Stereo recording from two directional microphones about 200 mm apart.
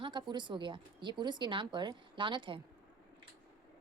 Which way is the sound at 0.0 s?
25° right (ahead or behind).